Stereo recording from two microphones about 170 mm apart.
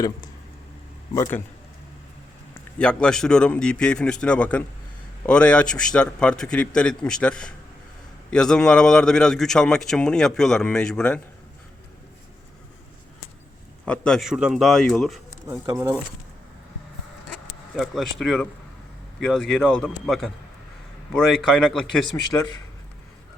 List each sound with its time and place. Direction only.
1.1 s a man's voice: 20° left (ahead or behind)
2.7 s a man's voice: 5° left (ahead or behind)
13.8 s a man's voice: 5° left (ahead or behind)
15.6 s speech: 20° right (ahead or behind)
17.7 s a man's voice: centre (ahead or behind)
22.1 s speech: 15° left (ahead or behind)